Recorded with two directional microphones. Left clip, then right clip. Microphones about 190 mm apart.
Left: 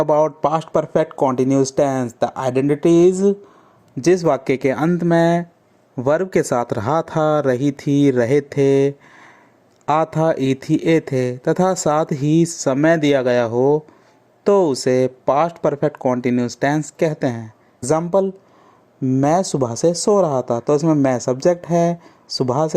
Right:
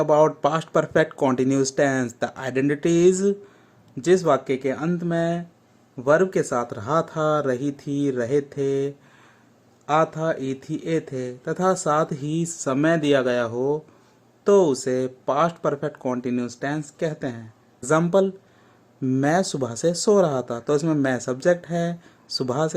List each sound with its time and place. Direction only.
0.0 s speech: 30° left (ahead or behind); by 3.3 s 15° left (ahead or behind)
4.0 s speech: 30° left (ahead or behind)
18.1 s speech: 20° left (ahead or behind)